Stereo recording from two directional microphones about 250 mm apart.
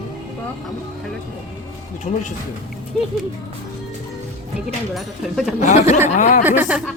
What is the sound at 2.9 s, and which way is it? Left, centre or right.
Speech, centre.